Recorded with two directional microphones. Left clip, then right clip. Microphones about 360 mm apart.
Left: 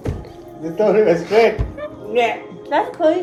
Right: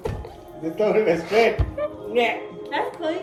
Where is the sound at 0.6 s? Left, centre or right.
Left.